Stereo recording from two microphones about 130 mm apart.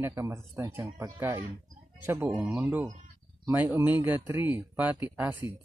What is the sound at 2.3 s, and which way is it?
Speech, 5° right (ahead or behind).